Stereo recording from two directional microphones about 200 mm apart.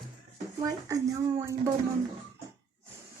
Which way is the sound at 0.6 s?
15° right (ahead or behind).